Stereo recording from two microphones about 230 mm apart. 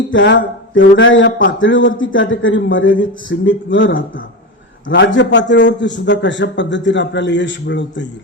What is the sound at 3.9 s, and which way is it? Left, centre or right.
Speech, left.